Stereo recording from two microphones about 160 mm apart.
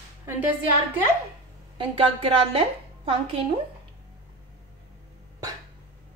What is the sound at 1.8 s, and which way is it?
A woman's voice, 35° right (ahead or behind).